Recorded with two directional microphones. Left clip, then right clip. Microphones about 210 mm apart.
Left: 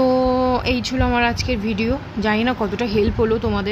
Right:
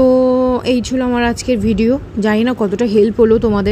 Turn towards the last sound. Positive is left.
turn(degrees=-25)  # may be behind; listen again after turning